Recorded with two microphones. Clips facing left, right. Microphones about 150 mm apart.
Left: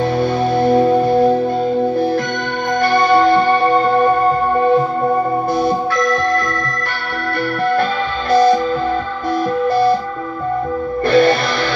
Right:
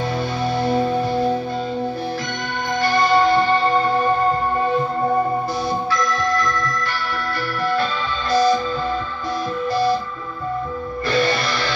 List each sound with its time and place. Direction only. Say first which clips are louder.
0.2 s music: left 7 dB; 55° left (ahead or behind)
2.8 s music: left 4 dB; 55° left (ahead or behind)
5.6 s organ: left 6 dB; 55° left (ahead or behind)
8.3 s music: left 5 dB; 55° left (ahead or behind)
9.7 s music: left 5 dB; 55° left (ahead or behind)
11.1 s music: left 8 dB; 55° left (ahead or behind)